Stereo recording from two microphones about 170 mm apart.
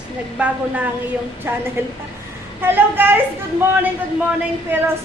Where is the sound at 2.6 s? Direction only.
10° right (ahead or behind).